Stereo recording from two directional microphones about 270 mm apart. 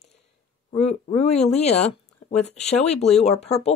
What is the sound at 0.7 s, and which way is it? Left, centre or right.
Speech, left.